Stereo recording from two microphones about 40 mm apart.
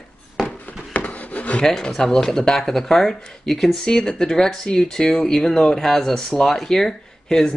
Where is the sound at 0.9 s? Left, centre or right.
Left.